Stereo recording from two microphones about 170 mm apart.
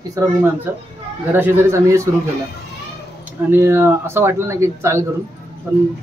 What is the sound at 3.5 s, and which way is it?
Speech, 15° right (ahead or behind).